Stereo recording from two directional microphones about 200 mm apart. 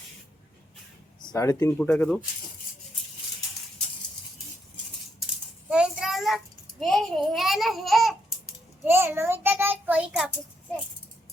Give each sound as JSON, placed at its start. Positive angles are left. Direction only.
{"t": 1.2, "sound": "speech", "side_deg": 15}
{"t": 5.7, "sound": "a child's voice", "side_deg": -5}
{"t": 8.8, "sound": "a child's voice", "side_deg": -10}